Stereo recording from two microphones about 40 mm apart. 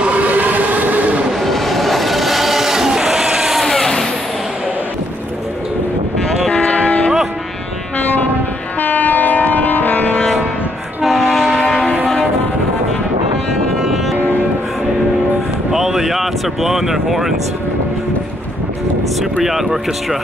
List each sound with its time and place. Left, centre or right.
0.0 s vehicle: right
1.4 s a sound: centre
3.5 s vehicle: centre
6.5 s vehicle: left
8.7 s train: left
11.1 s train: centre
13.7 s music: centre
14.1 s music: right
15.7 s vehicle: centre
19.4 s a sound: centre